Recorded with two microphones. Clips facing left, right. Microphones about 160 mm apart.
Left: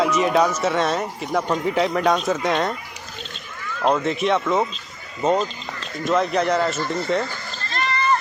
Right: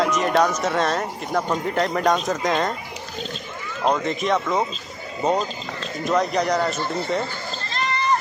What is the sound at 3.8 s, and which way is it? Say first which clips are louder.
Speech: left 2 dB; centre (ahead or behind).